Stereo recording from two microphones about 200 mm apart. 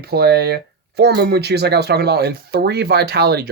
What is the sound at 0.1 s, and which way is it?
Speech, 55° right (ahead or behind).